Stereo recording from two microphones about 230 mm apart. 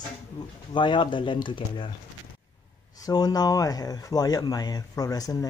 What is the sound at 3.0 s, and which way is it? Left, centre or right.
Speech, centre.